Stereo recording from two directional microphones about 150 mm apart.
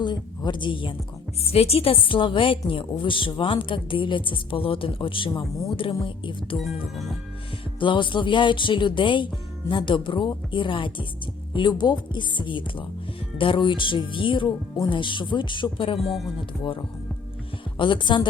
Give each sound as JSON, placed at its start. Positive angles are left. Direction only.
{"t": 0.0, "sound": "a woman's voice", "side_deg": 30}
{"t": 7.8, "sound": "a woman's voice", "side_deg": 35}
{"t": 16.0, "sound": "speech", "side_deg": 0}
{"t": 17.7, "sound": "a woman's voice", "side_deg": 35}